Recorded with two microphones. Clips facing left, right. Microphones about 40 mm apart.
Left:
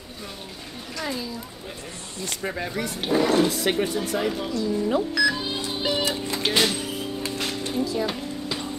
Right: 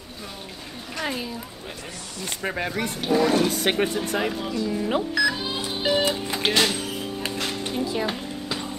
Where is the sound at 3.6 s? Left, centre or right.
Right.